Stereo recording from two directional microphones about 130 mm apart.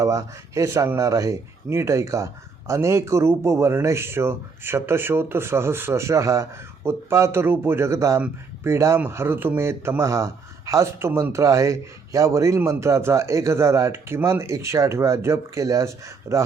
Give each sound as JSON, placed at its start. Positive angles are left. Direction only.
{"t": 0.0, "sound": "speech", "side_deg": -25}